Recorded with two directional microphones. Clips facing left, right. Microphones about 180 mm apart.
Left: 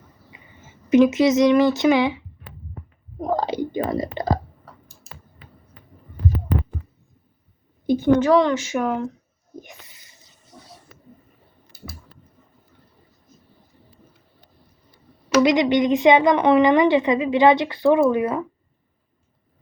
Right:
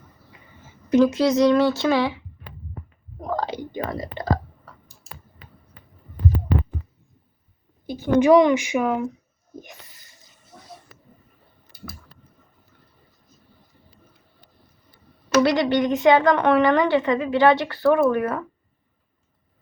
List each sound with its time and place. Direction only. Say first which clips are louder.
0.9 s a woman's voice: left 2 dB; 20° left (ahead or behind)
3.2 s clicking: left 4 dB; 20° left (ahead or behind)
7.9 s a woman's voice: even; 5° right (ahead or behind)
15.4 s a woman's voice: left 2 dB; 15° left (ahead or behind)